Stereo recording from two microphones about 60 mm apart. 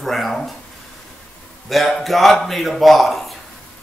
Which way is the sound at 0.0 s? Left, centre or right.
Centre.